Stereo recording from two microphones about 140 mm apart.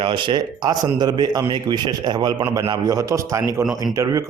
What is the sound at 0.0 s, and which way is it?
A man's voice, 35° right (ahead or behind).